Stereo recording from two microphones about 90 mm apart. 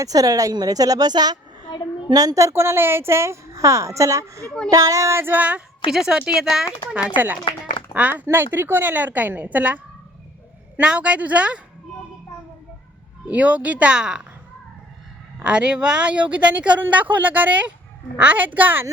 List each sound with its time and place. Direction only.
0.0 s a woman's voice: 40° right (ahead or behind)
1.6 s a sound: 60° left (ahead or behind)
2.0 s a woman's voice: 45° right (ahead or behind); by 6.7 s 5° right (ahead or behind)
7.9 s a woman's voice: 20° right (ahead or behind)
13.2 s speech: 15° right (ahead or behind)
15.4 s a woman's voice: 10° right (ahead or behind)